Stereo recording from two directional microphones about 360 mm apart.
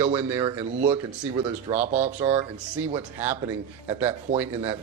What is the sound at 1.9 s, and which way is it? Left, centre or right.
Speech, centre.